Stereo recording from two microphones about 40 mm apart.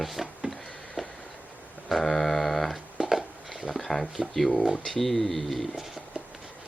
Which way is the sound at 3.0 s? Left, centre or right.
Centre.